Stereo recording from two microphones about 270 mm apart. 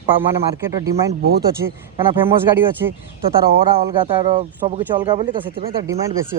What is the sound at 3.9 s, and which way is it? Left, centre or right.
Speech, centre.